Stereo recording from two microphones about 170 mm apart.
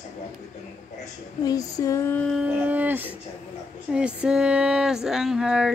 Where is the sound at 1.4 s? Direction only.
20° left (ahead or behind).